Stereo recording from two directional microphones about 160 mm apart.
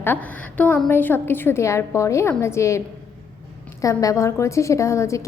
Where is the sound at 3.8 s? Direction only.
20° left (ahead or behind).